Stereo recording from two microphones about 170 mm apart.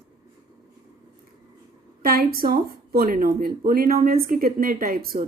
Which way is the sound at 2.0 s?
60° right (ahead or behind).